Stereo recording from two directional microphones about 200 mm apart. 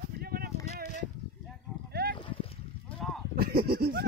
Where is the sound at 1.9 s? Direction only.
50° right (ahead or behind).